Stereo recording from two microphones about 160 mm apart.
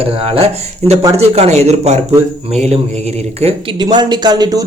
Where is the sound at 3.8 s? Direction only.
25° right (ahead or behind).